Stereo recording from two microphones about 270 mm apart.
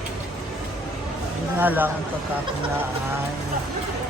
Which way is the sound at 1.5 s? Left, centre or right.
Centre.